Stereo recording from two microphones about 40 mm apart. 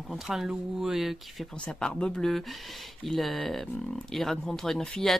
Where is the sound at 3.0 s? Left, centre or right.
Centre.